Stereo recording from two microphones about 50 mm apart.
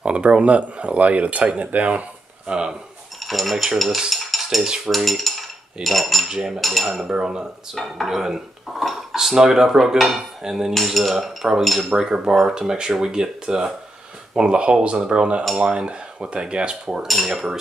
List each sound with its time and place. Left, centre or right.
0.0 s speech: right
2.4 s speech: centre
3.3 s dishes: centre
4.1 s cutlery: centre
4.9 s dishes: centre
6.2 s speech: centre
6.6 s dishes: centre
7.1 s speech: centre
7.7 s dishes: centre
11.9 s speech: centre